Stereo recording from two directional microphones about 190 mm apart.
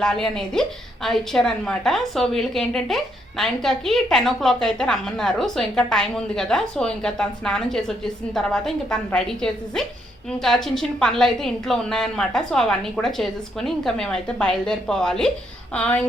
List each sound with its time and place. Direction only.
0.0 s a woman's voice: 5° left (ahead or behind)